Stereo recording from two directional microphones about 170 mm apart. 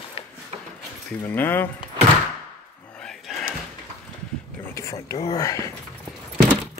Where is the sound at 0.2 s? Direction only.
35° left (ahead or behind).